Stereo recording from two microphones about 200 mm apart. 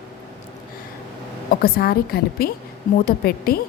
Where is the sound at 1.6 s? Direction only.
50° left (ahead or behind).